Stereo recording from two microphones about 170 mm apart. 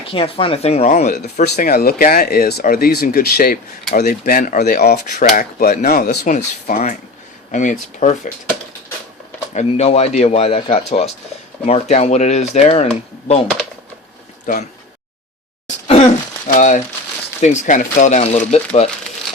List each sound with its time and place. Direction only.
0.0 s speech: 30° left (ahead or behind)
1.7 s speech: 65° left (ahead or behind)
5.3 s speech: 55° left (ahead or behind)
9.6 s speech: 40° left (ahead or behind)
14.5 s speech: 55° left (ahead or behind)
16.6 s speech: 45° left (ahead or behind)